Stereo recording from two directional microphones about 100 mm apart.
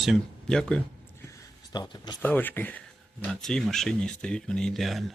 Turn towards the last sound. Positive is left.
turn(degrees=0)  # may be behind; listen again after turning